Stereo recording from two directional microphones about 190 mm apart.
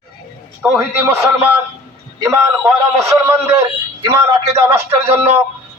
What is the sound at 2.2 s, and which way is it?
Speech, 15° right (ahead or behind).